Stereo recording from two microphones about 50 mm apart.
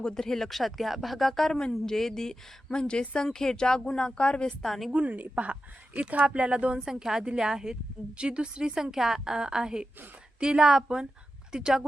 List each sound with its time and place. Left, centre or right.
0.0 s a woman's voice: centre
3.2 s a woman's voice: centre
4.6 s speech: centre
4.9 s speech: right
6.7 s a woman's voice: centre